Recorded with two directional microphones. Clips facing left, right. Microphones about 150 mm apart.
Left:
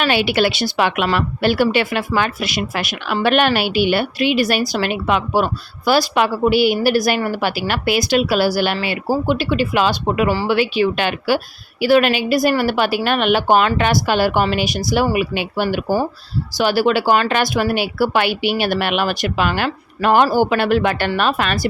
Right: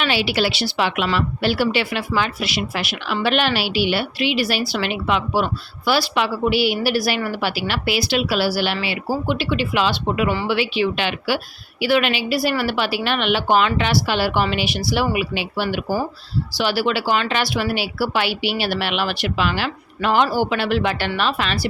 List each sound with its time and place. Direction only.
0.0 s speech: 55° left (ahead or behind)